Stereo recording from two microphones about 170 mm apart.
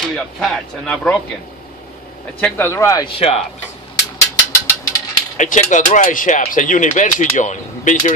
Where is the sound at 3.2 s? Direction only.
35° left (ahead or behind).